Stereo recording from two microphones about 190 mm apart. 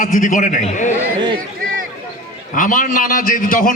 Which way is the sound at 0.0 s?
45° left (ahead or behind).